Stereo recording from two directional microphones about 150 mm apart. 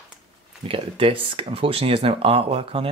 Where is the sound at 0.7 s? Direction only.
35° right (ahead or behind).